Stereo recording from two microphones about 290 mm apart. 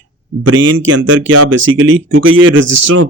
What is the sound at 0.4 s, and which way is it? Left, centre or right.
Speech, right.